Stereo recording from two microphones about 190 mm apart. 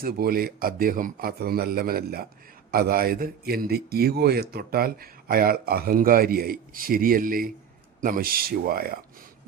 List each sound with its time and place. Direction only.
0.0 s a man's voice: 50° right (ahead or behind)